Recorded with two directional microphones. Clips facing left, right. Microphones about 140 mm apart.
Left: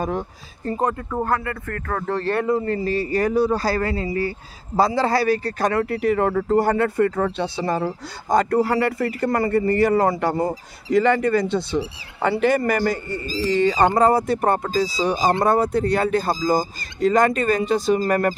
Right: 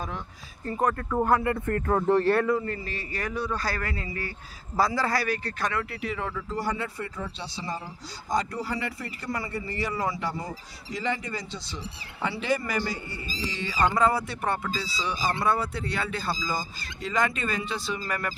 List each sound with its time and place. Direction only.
1.2 s speech: 20° right (ahead or behind)
2.3 s speech: 25° left (ahead or behind)
2.6 s speech: 35° left (ahead or behind)